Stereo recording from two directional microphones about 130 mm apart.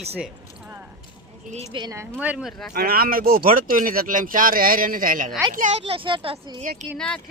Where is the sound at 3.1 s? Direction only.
90° right.